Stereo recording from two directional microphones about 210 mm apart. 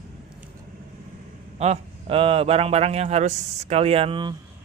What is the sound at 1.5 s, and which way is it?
A man's voice, 30° right (ahead or behind).